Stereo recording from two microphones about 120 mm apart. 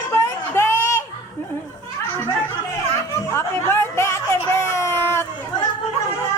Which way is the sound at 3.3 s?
20° left (ahead or behind).